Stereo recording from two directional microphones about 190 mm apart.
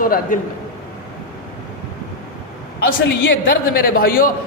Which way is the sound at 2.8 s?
55° left (ahead or behind).